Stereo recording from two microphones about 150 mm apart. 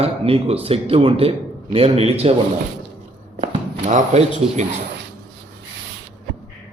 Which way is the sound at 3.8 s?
50° right (ahead or behind).